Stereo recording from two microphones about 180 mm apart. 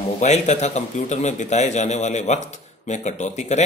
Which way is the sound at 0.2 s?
40° left (ahead or behind).